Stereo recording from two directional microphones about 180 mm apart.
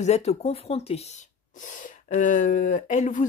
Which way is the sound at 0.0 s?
35° left (ahead or behind).